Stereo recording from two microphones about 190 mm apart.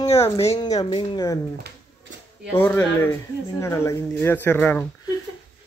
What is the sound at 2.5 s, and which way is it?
Speech, 10° left (ahead or behind).